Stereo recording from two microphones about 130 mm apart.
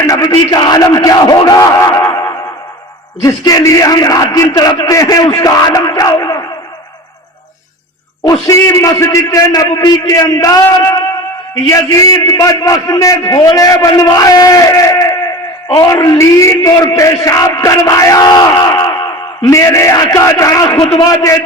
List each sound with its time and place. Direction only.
0.0 s a man's voice: 25° left (ahead or behind)
3.2 s a man's voice: 25° left (ahead or behind)
8.2 s a man's voice: 25° left (ahead or behind)